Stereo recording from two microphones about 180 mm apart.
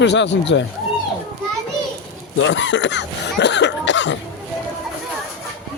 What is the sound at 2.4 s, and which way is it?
Speech, 90° left.